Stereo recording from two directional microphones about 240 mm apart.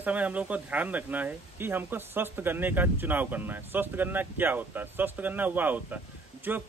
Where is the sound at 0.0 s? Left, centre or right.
Centre.